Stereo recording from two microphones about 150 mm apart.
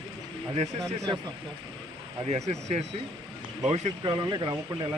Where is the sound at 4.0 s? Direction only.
30° right (ahead or behind).